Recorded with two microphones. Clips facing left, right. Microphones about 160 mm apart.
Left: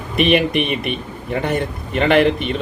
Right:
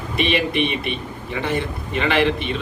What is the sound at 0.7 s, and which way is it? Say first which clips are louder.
A man's voice: left 3 dB; 50° left (ahead or behind).